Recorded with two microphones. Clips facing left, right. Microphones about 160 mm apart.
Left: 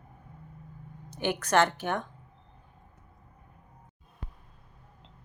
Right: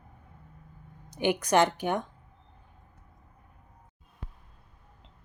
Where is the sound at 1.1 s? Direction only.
15° right (ahead or behind).